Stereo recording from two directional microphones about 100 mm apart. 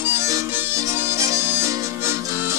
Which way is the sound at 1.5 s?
25° right (ahead or behind).